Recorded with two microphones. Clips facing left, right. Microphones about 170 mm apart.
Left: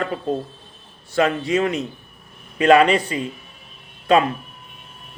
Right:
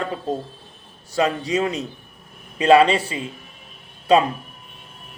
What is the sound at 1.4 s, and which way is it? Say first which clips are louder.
A man's voice: left 2 dB; 30° right (ahead or behind).